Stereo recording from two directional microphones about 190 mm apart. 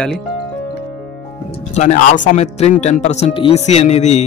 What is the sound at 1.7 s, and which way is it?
Speech, 35° left (ahead or behind).